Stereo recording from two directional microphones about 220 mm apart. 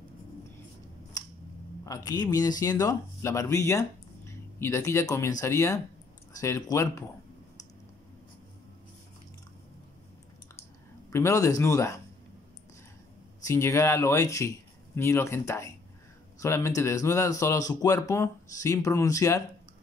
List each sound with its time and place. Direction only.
1.1 s scissors: 15° left (ahead or behind)
1.9 s speech: 15° left (ahead or behind)
11.1 s speech: 15° left (ahead or behind)
13.5 s speech: 10° left (ahead or behind)